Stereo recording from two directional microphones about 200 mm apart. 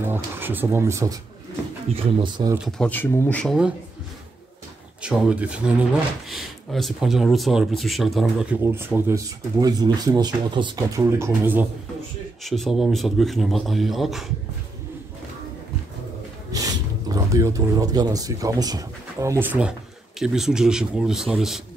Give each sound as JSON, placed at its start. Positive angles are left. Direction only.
{"t": 0.0, "sound": "speech", "side_deg": -10}
{"t": 2.8, "sound": "speech", "side_deg": 10}
{"t": 5.0, "sound": "a man's voice", "side_deg": -5}
{"t": 12.4, "sound": "a man's voice", "side_deg": 0}
{"t": 16.5, "sound": "a man's voice", "side_deg": -15}